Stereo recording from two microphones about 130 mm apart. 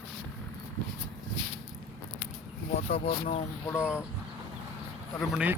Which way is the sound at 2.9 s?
50° left (ahead or behind).